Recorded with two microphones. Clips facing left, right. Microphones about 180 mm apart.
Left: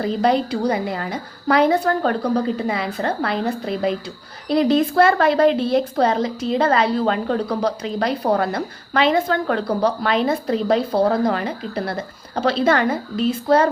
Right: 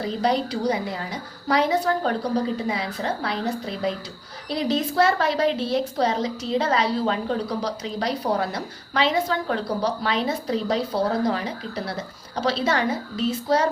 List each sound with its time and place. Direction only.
0.0 s a woman's voice: 55° left (ahead or behind)